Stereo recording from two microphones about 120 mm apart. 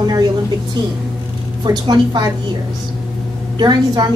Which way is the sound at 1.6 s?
35° right (ahead or behind).